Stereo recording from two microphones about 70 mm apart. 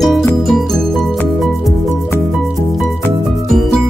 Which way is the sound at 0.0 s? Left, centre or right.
Centre.